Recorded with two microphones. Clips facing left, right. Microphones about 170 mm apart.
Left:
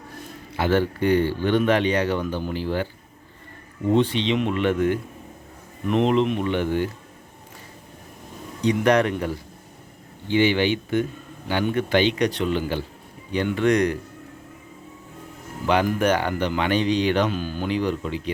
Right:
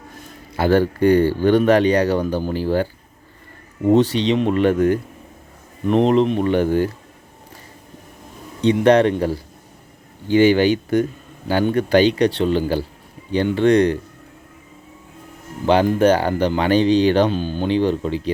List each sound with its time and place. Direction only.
0.5 s speech: 40° right (ahead or behind)
3.9 s speech: 40° right (ahead or behind)
8.6 s speech: 30° right (ahead or behind)
10.2 s speech: 40° right (ahead or behind)
15.6 s speech: 30° right (ahead or behind)